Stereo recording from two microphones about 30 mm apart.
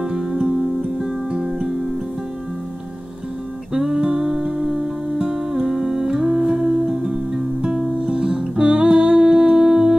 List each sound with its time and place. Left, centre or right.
0.0 s music: right
3.7 s music: centre